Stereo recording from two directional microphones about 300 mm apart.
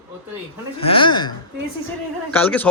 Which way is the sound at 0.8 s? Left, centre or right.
Centre.